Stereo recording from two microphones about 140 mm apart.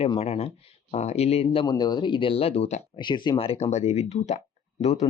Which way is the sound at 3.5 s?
50° left (ahead or behind).